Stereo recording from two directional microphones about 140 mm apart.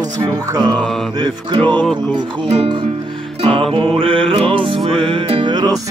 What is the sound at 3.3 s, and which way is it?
Music, 45° right (ahead or behind).